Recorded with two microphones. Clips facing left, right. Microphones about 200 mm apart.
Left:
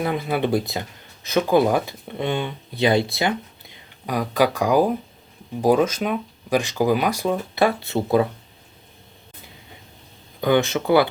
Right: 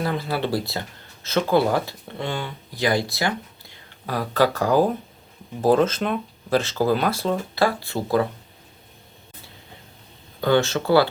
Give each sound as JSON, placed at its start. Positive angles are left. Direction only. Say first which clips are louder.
{"t": 0.0, "sound": "speech", "louder": "left 2 dB", "side_deg": 20}
{"t": 10.4, "sound": "speech", "louder": "left 1 dB", "side_deg": 15}